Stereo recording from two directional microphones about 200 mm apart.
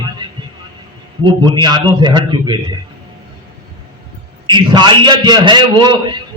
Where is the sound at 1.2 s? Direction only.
20° right (ahead or behind).